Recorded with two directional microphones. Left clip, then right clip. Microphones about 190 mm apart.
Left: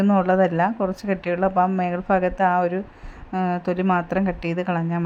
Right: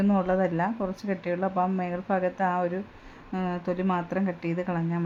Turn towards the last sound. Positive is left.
turn(degrees=30)  # may be behind; listen again after turning